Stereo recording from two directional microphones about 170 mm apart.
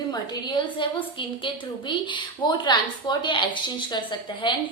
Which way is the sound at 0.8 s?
30° left (ahead or behind).